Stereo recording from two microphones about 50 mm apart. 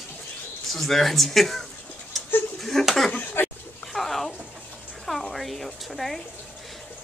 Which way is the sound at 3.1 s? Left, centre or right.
Left.